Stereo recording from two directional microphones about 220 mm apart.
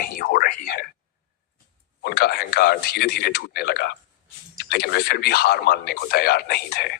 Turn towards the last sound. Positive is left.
turn(degrees=45)  # may be behind; listen again after turning